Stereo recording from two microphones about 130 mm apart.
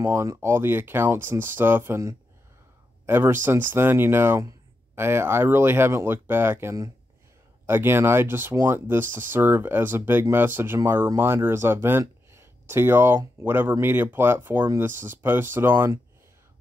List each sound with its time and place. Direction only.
0.0 s speech: 25° right (ahead or behind)